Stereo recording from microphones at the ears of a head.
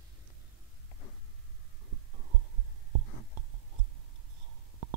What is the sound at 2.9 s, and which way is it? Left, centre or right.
Whispering, right.